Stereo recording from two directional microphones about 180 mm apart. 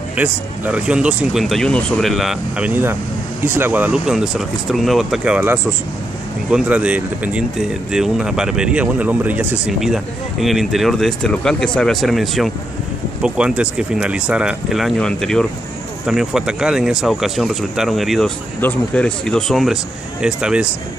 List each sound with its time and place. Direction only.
0.1 s speech: 5° right (ahead or behind)